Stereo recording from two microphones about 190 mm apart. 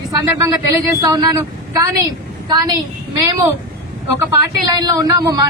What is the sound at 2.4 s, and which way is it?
Speech, 20° right (ahead or behind).